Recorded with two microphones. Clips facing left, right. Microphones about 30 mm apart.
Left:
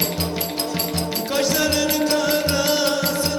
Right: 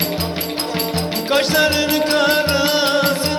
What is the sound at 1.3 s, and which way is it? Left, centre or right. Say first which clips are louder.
Music: right 5 dB; right.